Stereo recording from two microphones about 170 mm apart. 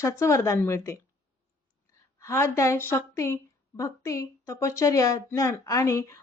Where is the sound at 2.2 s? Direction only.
15° left (ahead or behind).